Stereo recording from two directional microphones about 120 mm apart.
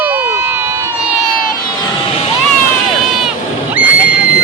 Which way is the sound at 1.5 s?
35° left (ahead or behind).